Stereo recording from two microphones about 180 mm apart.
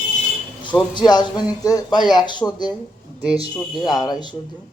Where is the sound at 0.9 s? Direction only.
25° left (ahead or behind).